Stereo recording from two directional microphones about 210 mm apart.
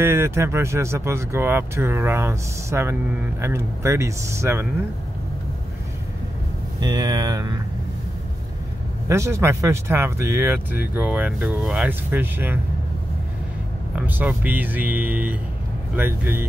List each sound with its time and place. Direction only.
0.0 s speech: 10° right (ahead or behind)
6.8 s speech: 15° right (ahead or behind)
9.1 s speech: 15° right (ahead or behind)
13.9 s speech: 10° right (ahead or behind)